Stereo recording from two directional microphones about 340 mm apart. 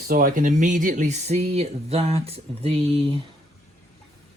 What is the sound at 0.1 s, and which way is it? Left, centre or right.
Speech, right.